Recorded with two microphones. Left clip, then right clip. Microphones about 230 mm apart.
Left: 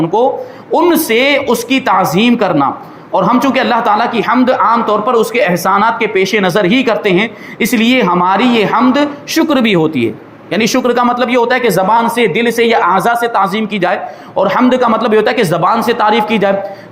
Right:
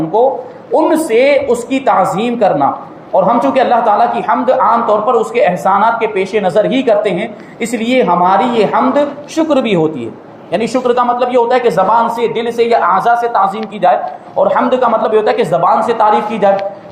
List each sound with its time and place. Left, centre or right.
0.8 s a man's voice: left